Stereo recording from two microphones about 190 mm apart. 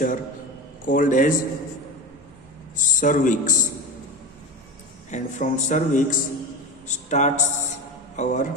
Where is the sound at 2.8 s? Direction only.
45° left (ahead or behind).